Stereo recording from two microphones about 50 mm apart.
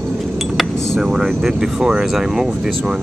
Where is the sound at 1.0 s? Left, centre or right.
Centre.